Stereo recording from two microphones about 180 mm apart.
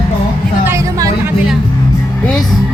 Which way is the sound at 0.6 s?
15° right (ahead or behind).